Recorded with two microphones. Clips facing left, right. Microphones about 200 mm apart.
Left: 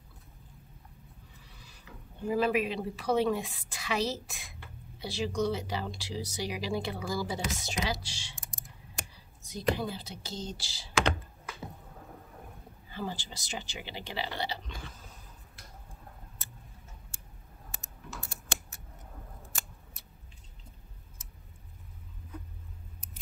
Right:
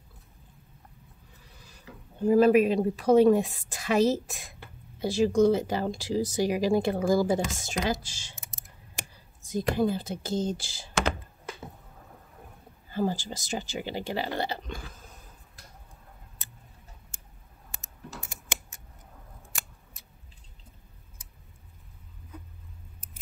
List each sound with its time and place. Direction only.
2.2 s speech: 45° right (ahead or behind)
9.1 s a sound: 50° right (ahead or behind)
9.8 s speech: 50° right (ahead or behind)
10.9 s speech: centre (ahead or behind)
12.9 s speech: 45° right (ahead or behind)